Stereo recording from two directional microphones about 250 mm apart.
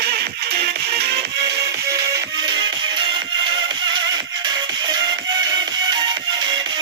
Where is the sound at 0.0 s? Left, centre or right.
Right.